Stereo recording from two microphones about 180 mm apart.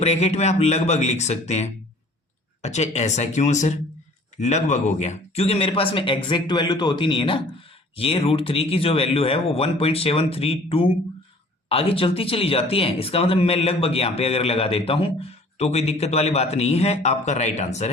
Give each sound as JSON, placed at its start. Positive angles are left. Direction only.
{"t": 0.0, "sound": "a man's voice", "side_deg": 35}